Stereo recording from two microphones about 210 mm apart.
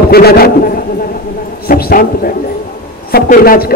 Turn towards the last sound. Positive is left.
turn(degrees=45)  # may be behind; listen again after turning